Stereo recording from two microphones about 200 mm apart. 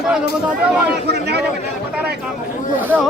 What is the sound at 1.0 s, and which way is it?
Speech, 55° right (ahead or behind).